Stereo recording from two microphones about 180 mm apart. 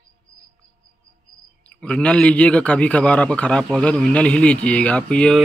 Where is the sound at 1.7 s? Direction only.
5° left (ahead or behind).